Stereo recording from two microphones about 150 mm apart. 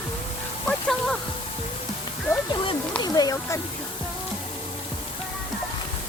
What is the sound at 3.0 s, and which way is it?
Speech, 25° left (ahead or behind).